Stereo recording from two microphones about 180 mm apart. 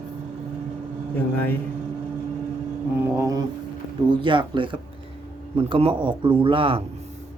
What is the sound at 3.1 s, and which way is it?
A man's voice, 15° right (ahead or behind).